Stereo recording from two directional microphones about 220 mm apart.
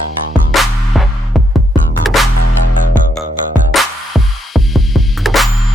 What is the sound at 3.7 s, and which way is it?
Music, centre (ahead or behind).